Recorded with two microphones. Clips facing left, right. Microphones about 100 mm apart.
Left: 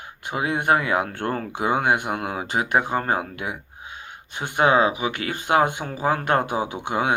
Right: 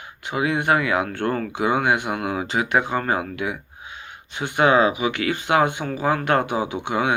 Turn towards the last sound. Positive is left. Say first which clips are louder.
# right 1 dB
turn(degrees=45)  # may be behind; listen again after turning